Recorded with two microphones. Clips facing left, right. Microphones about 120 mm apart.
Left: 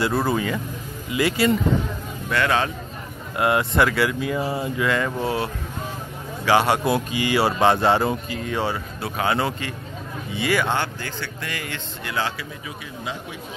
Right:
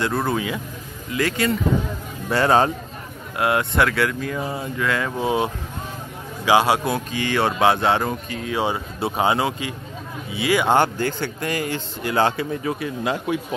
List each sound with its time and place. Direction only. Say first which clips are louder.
0.0 s speech: left 1 dB; 5° left (ahead or behind)
2.2 s speech: right 4 dB; 35° right (ahead or behind)
3.3 s speech: even; centre (ahead or behind)
5.2 s a man's voice: right 3 dB; 20° right (ahead or behind)
6.8 s speech: left 2 dB; 5° left (ahead or behind)
8.5 s speech: right 4 dB; 20° right (ahead or behind)
9.4 s a man's voice: right 1 dB; 10° right (ahead or behind)
10.7 s speech: right 7 dB; 45° right (ahead or behind)
12.3 s a man's voice: right 9 dB; 50° right (ahead or behind); by 13.4 s 70° right (ahead or behind)